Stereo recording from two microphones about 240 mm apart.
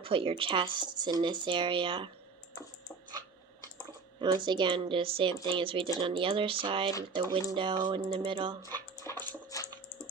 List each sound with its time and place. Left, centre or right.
0.0 s speech: right
4.2 s speech: centre
9.0 s dog: centre